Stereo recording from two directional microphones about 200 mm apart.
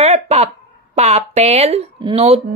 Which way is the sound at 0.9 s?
35° right (ahead or behind).